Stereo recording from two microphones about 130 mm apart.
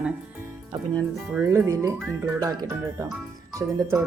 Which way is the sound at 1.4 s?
20° right (ahead or behind).